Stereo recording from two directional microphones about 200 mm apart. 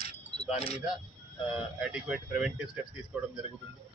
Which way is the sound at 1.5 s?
5° right (ahead or behind).